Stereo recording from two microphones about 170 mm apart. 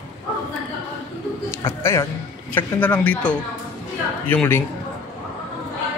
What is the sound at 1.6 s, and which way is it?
A man's voice, 15° left (ahead or behind).